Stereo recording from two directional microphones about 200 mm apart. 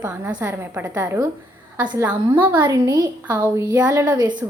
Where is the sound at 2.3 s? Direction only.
10° right (ahead or behind).